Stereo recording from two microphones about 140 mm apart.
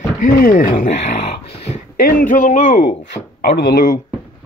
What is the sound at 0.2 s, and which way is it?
Speech, 85° left.